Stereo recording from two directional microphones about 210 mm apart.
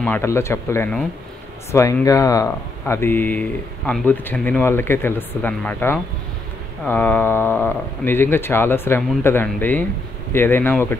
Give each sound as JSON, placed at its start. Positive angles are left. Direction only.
{"t": 0.0, "sound": "speech", "side_deg": 10}